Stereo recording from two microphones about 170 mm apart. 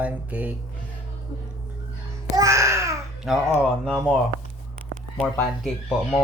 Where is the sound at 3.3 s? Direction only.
Centre (ahead or behind).